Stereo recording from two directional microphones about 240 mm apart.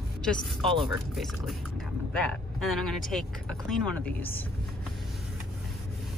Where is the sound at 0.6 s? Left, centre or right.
Right.